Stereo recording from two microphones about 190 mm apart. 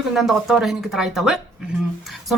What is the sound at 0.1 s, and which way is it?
A woman's voice, centre (ahead or behind).